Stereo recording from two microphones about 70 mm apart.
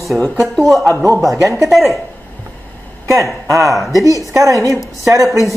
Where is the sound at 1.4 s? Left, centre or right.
Right.